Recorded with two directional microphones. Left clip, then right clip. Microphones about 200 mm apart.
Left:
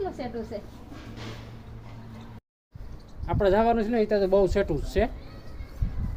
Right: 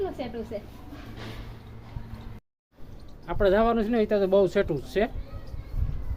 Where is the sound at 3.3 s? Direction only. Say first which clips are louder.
Even; 5° left (ahead or behind).